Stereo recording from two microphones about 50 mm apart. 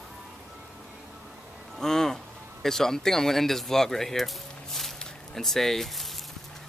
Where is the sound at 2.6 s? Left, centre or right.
Centre.